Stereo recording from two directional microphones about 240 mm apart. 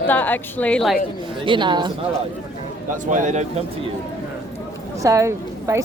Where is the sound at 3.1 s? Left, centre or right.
Right.